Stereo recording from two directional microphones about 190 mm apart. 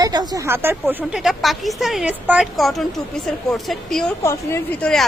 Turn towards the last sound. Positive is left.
turn(degrees=15)  # may be behind; listen again after turning